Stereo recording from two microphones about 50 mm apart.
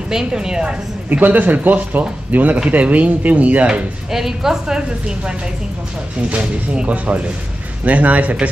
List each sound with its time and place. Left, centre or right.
0.1 s a woman's voice: centre
1.1 s speech: right
4.1 s a woman's voice: centre
6.3 s speech: right